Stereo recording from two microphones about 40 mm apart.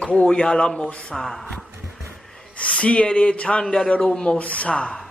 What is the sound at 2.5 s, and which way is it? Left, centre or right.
Speech, left.